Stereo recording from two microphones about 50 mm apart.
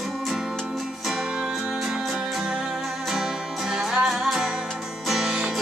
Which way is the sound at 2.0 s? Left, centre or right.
Centre.